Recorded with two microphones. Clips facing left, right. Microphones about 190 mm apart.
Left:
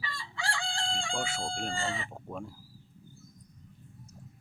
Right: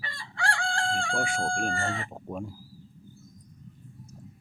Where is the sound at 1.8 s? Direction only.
60° right (ahead or behind).